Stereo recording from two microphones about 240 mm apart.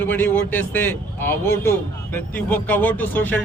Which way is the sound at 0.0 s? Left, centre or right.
Centre.